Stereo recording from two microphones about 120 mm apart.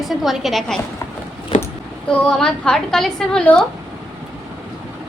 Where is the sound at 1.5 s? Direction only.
90° left.